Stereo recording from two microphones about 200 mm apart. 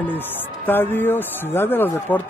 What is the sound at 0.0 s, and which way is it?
Speech, 10° left (ahead or behind).